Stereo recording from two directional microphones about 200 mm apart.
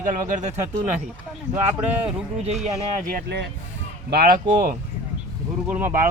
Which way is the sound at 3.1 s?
50° right (ahead or behind).